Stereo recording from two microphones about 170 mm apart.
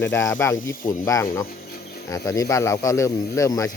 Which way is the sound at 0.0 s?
20° left (ahead or behind).